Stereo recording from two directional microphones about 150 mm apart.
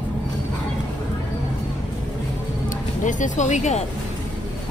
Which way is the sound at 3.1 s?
55° left (ahead or behind).